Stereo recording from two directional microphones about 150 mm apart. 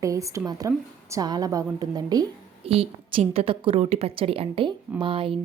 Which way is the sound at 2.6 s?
40° right (ahead or behind).